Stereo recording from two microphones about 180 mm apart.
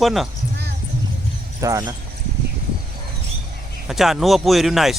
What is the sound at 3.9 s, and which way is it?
Speech, centre (ahead or behind).